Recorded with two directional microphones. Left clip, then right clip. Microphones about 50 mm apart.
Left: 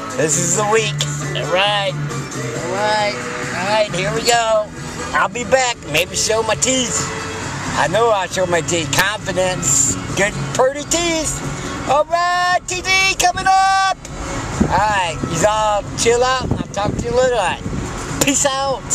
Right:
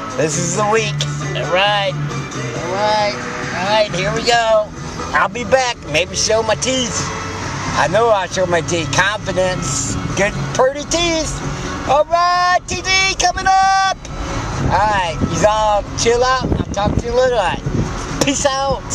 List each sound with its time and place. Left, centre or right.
0.2 s speech: centre; by 3.9 s right
4.3 s speech: centre